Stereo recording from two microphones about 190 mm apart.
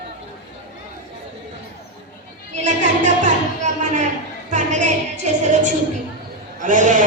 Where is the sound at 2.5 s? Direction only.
40° right (ahead or behind).